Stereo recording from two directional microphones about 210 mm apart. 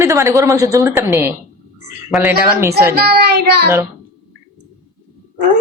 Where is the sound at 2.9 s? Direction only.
50° right (ahead or behind).